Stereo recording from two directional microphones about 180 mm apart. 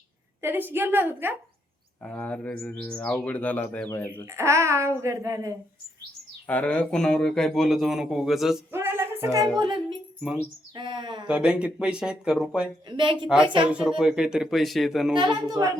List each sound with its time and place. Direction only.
0.4 s a child's voice: 10° right (ahead or behind)
2.0 s speech: 5° left (ahead or behind)
4.3 s a child's voice: 15° right (ahead or behind)
6.5 s speech: 10° left (ahead or behind)
8.7 s music: 15° right (ahead or behind)
9.6 s a woman's voice: 25° right (ahead or behind)
11.3 s speech: 5° right (ahead or behind)
12.9 s a woman's voice: 25° right (ahead or behind)
13.7 s speech: 5° right (ahead or behind)
15.1 s a woman's voice: 25° right (ahead or behind)